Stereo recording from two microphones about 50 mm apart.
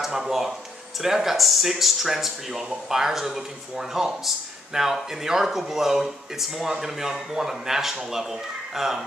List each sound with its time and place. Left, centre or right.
0.0 s speech: centre